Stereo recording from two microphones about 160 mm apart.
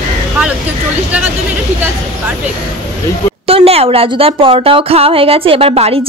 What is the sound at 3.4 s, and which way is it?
Speech, 40° right (ahead or behind).